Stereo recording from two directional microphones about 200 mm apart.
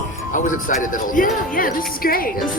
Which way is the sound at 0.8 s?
40° left (ahead or behind).